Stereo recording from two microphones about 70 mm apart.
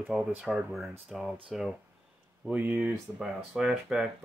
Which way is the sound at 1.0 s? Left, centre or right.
Centre.